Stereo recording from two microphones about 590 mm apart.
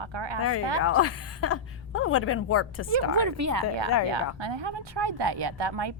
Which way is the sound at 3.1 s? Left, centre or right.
Right.